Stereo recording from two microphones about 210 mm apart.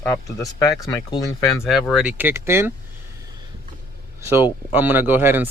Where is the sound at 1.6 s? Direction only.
Centre (ahead or behind).